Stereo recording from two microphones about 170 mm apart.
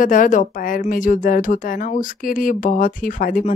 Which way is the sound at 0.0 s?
50° left (ahead or behind).